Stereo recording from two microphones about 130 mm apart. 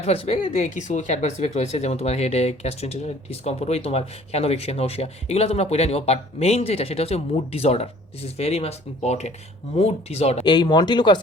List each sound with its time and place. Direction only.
0.0 s speech: 50° left (ahead or behind)
0.4 s speech: 65° left (ahead or behind)
10.4 s speech: 35° left (ahead or behind)